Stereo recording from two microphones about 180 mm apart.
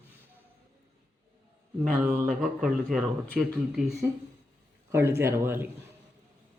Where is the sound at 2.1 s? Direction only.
50° right (ahead or behind).